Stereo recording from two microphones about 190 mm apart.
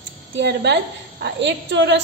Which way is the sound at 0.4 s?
65° right (ahead or behind).